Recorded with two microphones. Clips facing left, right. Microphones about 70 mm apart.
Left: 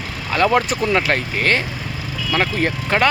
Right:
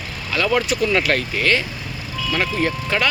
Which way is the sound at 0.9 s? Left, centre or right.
Left.